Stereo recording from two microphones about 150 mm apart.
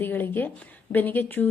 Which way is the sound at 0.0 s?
15° left (ahead or behind).